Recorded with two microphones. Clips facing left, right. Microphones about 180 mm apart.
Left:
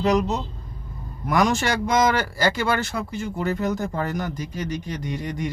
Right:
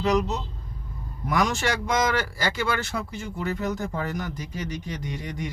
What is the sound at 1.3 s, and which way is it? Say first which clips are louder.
Speech: left 4 dB; 50° left (ahead or behind).